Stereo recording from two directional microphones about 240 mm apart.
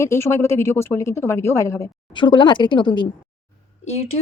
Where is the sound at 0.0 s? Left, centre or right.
Centre.